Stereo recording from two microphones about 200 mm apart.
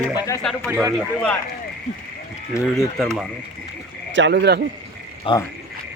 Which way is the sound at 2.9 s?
Centre (ahead or behind).